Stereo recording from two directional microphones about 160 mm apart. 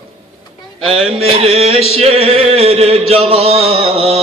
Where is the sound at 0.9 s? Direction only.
35° right (ahead or behind).